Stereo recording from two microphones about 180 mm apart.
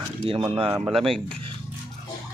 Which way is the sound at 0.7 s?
10° right (ahead or behind).